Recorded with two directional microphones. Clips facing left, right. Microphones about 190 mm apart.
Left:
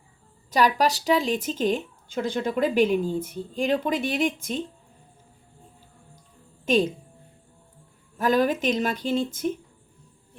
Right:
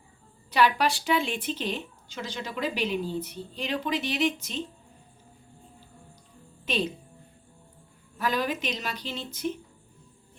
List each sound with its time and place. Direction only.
0.5 s speech: 40° left (ahead or behind)
6.7 s speech: 45° left (ahead or behind)
8.2 s speech: 45° left (ahead or behind)